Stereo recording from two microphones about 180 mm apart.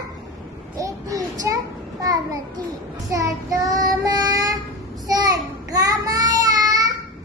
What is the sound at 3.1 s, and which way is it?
Child singing, 20° right (ahead or behind).